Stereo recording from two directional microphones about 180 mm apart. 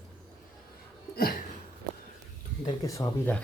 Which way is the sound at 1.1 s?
55° left (ahead or behind).